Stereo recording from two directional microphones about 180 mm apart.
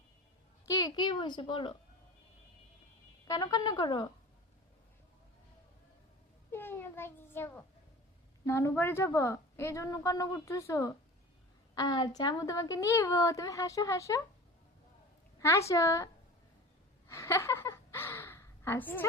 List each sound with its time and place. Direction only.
0.8 s a woman's voice: 25° left (ahead or behind)
3.2 s a woman's voice: 25° left (ahead or behind)
6.5 s a woman's voice: 10° left (ahead or behind)
15.4 s a woman's voice: 15° left (ahead or behind)
17.1 s a sound: 15° left (ahead or behind)